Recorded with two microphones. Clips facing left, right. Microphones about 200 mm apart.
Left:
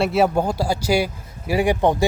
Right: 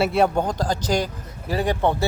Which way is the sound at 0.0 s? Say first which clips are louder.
Left 1 dB; centre (ahead or behind).